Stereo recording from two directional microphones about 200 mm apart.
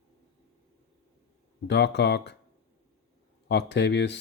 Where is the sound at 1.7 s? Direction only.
60° left (ahead or behind).